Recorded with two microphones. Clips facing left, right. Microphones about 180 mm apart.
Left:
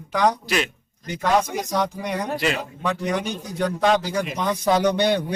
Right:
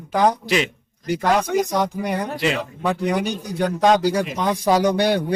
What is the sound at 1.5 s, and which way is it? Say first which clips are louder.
Speech: right 8 dB; 70° right (ahead or behind).